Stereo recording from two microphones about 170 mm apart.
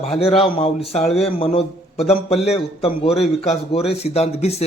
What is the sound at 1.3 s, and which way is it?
A man's voice, 35° left (ahead or behind).